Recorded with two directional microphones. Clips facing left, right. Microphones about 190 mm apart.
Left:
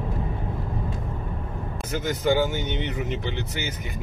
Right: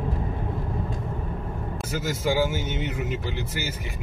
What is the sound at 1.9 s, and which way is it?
Speech, 5° right (ahead or behind).